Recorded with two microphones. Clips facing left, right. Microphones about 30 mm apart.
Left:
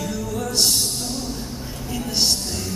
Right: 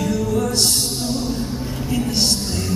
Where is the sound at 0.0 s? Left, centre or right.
Centre.